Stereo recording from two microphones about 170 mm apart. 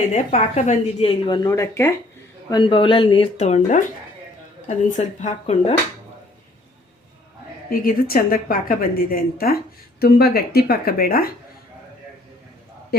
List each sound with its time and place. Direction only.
0.1 s a woman's voice: 40° left (ahead or behind); by 1.9 s 15° left (ahead or behind)
2.5 s speech: 25° left (ahead or behind)
4.9 s speech: 45° left (ahead or behind)
7.7 s a woman's voice: 60° left (ahead or behind)
12.9 s speech: 70° left (ahead or behind)